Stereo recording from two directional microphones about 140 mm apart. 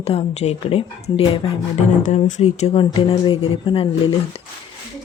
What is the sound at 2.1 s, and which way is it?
A woman's voice, 55° left (ahead or behind).